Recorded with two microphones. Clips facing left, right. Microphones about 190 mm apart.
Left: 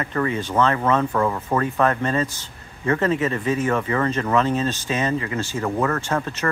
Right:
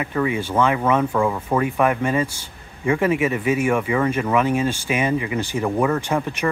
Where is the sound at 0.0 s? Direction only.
10° right (ahead or behind).